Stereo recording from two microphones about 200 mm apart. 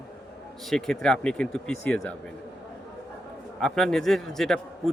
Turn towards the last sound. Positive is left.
turn(degrees=0)  # may be behind; listen again after turning